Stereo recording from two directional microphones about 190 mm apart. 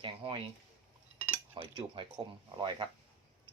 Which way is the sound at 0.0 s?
25° right (ahead or behind).